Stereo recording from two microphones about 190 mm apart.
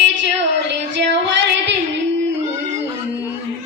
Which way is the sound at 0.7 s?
70° right (ahead or behind).